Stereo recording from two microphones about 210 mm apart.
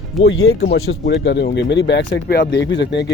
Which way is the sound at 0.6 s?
50° left (ahead or behind).